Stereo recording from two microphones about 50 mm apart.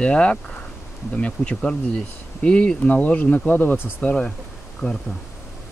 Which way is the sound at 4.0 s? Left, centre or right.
Left.